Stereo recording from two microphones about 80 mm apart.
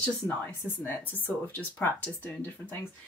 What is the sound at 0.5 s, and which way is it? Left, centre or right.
Speech, left.